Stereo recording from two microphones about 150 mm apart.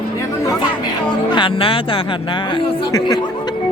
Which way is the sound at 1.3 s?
35° left (ahead or behind).